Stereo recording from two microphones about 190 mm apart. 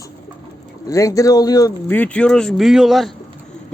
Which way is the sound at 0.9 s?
15° left (ahead or behind).